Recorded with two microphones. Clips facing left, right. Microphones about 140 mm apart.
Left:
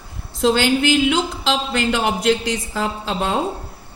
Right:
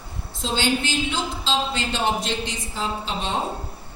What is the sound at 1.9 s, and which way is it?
A woman's voice, 90° left.